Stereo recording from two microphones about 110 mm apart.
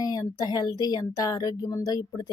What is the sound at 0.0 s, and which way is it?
A woman's voice, 35° left (ahead or behind).